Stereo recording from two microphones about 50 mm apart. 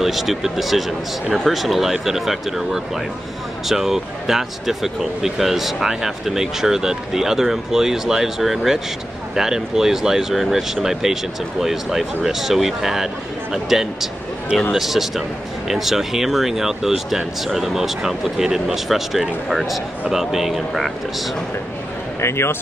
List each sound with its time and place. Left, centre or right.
0.0 s speech: centre
22.2 s speech: left